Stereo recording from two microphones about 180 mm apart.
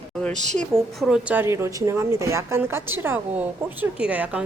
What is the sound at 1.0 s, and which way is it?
A woman's voice, 5° right (ahead or behind).